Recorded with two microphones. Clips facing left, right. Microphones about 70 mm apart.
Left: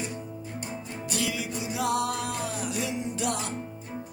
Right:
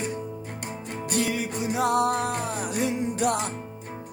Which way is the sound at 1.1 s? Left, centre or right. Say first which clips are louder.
Right 4 dB; right.